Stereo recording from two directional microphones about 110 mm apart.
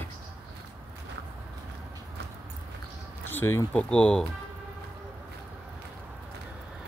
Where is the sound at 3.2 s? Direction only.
20° left (ahead or behind).